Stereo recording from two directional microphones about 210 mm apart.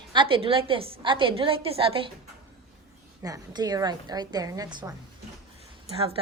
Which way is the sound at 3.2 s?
15° right (ahead or behind).